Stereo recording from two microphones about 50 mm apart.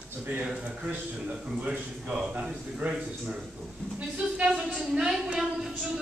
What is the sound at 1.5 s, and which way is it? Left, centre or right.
Speech, right.